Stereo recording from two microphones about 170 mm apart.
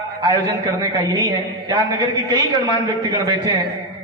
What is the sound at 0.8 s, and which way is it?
A woman's voice, 25° right (ahead or behind).